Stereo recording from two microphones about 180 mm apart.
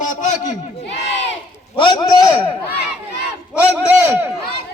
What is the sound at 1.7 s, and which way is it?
Speech, 25° left (ahead or behind).